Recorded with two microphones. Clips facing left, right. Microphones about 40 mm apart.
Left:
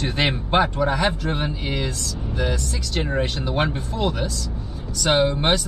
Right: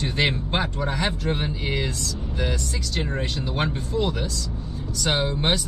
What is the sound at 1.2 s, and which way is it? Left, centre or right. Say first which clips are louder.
A man's voice: left 1 dB; centre.